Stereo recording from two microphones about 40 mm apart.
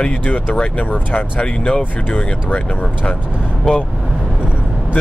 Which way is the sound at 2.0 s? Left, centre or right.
Left.